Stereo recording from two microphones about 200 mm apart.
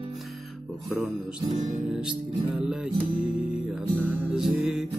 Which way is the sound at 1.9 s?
5° right (ahead or behind).